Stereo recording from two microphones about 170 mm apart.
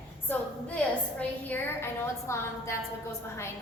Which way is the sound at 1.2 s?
10° left (ahead or behind).